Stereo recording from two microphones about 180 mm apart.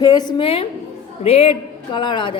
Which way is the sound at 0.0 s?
20° left (ahead or behind).